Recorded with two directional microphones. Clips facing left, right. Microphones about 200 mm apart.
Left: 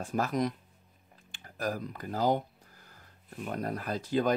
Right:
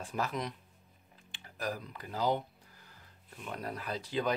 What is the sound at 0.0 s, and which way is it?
Speech, 45° left (ahead or behind).